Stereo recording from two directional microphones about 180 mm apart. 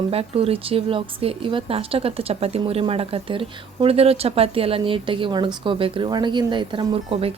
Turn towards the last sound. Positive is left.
turn(degrees=-30)  # may be behind; listen again after turning